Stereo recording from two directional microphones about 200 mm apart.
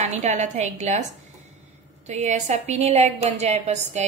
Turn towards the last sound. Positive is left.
turn(degrees=-35)  # may be behind; listen again after turning